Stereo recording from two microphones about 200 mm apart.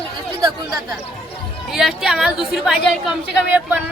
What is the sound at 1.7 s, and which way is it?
A woman's voice, centre (ahead or behind).